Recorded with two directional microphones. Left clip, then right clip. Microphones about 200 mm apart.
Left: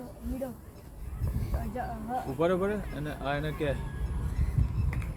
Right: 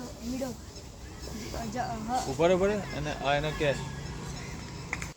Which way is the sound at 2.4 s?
55° left (ahead or behind).